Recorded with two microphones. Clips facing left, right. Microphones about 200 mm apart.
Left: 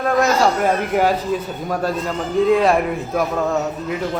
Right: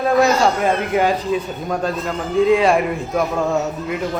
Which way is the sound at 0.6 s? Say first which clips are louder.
Even; 5° left (ahead or behind).